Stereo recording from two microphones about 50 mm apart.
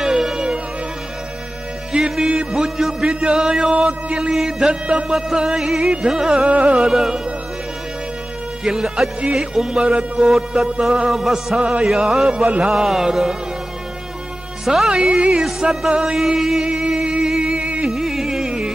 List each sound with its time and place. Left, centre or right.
0.0 s music: centre
1.9 s music: centre
4.6 s speech: right
5.1 s music: centre
6.5 s speech: right
6.9 s music: centre
8.6 s music: centre
10.3 s music: centre
14.6 s speech: centre
14.9 s speech: centre
15.9 s music: centre
17.8 s music: centre